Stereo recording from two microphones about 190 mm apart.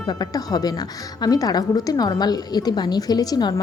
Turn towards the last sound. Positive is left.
turn(degrees=20)  # may be behind; listen again after turning